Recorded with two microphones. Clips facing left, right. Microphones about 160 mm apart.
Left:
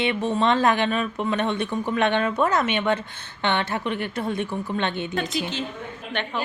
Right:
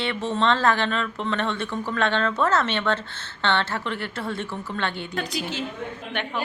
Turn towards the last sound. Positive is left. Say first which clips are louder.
# even
turn(degrees=-10)  # may be behind; listen again after turning